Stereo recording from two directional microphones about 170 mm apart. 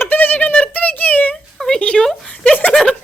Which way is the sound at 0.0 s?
10° left (ahead or behind).